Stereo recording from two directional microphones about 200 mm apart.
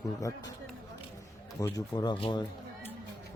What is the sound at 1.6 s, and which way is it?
Speech, 20° left (ahead or behind).